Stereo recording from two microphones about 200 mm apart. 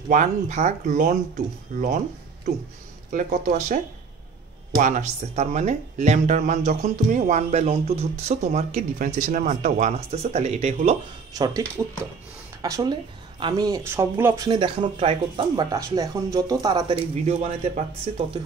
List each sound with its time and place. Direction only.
0.1 s speech: 35° right (ahead or behind)
3.1 s speech: 40° right (ahead or behind)
11.3 s speech: 20° right (ahead or behind)
12.6 s speech: 20° right (ahead or behind)
17.3 s speech: 35° right (ahead or behind)